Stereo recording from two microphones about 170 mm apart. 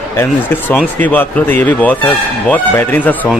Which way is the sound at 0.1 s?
15° left (ahead or behind).